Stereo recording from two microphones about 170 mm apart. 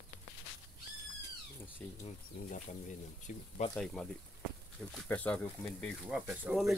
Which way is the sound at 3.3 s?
45° left (ahead or behind).